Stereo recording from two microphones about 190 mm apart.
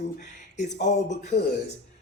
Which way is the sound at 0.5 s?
40° left (ahead or behind).